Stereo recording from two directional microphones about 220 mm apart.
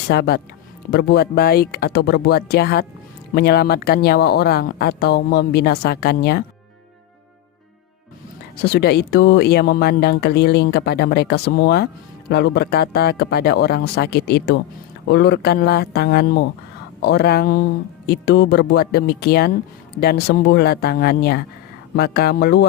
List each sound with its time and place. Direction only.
0.1 s speech: 45° left (ahead or behind)
8.6 s speech: 50° left (ahead or behind)